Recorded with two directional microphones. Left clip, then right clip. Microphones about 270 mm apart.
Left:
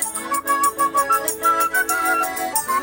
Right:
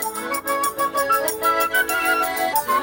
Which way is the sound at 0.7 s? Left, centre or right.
Right.